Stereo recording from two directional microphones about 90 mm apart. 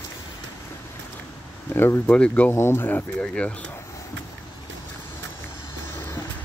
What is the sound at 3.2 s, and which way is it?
Speech, 10° left (ahead or behind).